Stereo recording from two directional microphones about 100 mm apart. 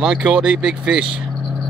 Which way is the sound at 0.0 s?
5° right (ahead or behind).